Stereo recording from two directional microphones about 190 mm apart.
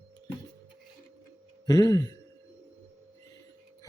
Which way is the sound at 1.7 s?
20° left (ahead or behind).